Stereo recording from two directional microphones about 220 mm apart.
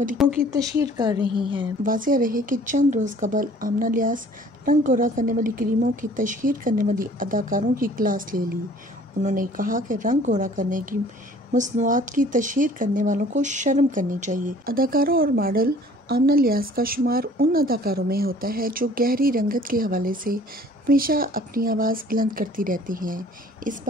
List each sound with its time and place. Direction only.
0.5 s a woman's voice: 15° right (ahead or behind)
1.8 s speech: 40° right (ahead or behind)